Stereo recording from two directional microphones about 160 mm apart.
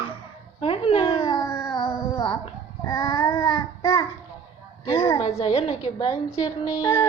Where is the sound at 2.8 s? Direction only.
20° left (ahead or behind).